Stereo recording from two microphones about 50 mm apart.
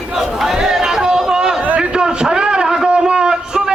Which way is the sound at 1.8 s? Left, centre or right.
Centre.